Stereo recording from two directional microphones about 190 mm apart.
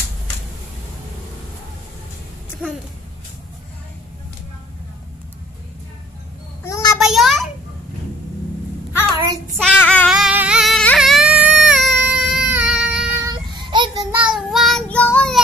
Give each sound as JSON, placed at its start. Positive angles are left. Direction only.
{"t": 6.6, "sound": "child singing", "side_deg": 20}
{"t": 7.0, "sound": "a sound", "side_deg": 0}
{"t": 9.1, "sound": "child singing", "side_deg": -20}
{"t": 9.6, "sound": "child singing", "side_deg": 5}
{"t": 10.0, "sound": "a sound", "side_deg": -5}
{"t": 13.7, "sound": "child singing", "side_deg": -25}
{"t": 14.1, "sound": "child singing", "side_deg": -5}